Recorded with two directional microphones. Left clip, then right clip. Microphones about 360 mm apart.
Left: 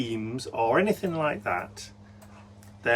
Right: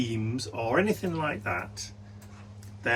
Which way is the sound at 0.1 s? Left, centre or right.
Centre.